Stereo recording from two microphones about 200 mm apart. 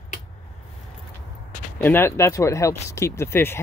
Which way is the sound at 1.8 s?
10° left (ahead or behind).